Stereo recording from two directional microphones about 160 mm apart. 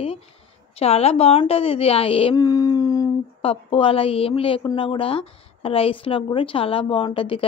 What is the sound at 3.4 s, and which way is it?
A woman's voice, 35° left (ahead or behind).